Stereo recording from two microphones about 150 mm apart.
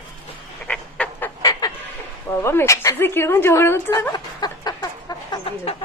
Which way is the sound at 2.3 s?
20° left (ahead or behind).